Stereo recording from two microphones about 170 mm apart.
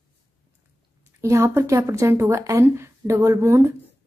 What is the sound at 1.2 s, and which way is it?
Speech, 15° right (ahead or behind).